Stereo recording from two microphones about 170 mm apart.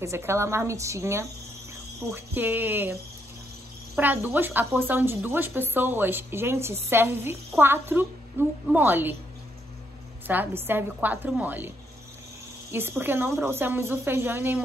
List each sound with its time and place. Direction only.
0.0 s speech: 15° right (ahead or behind)
10.2 s speech: 10° right (ahead or behind)
13.0 s speech: 10° right (ahead or behind)